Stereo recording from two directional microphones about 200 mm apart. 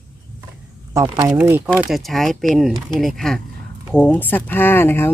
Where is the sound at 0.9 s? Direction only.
20° right (ahead or behind).